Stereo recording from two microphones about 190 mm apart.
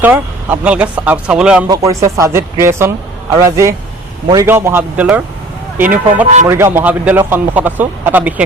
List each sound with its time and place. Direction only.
0.0 s speech: 10° right (ahead or behind)
1.6 s speech: 15° right (ahead or behind)